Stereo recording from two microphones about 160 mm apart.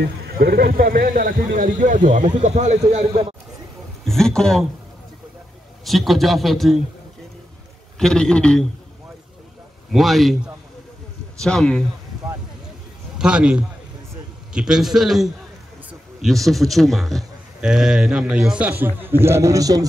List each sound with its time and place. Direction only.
0.0 s speech: 90° right; by 3.3 s 40° right (ahead or behind)
4.0 s speech: 5° left (ahead or behind)
5.9 s a man's voice: centre (ahead or behind)
8.0 s a man's voice: 5° left (ahead or behind)
9.9 s a man's voice: centre (ahead or behind)
13.2 s a man's voice: 5° right (ahead or behind); by 19.9 s 20° right (ahead or behind)